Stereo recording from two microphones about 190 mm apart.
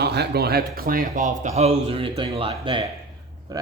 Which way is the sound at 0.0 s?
60° right (ahead or behind).